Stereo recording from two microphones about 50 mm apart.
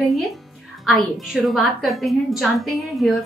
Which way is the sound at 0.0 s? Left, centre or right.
Centre.